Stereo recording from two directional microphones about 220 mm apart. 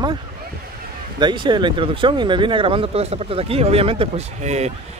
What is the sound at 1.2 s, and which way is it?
Speech, 20° right (ahead or behind).